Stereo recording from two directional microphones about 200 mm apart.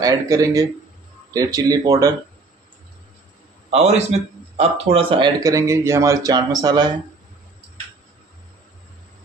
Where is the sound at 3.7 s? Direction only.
35° right (ahead or behind).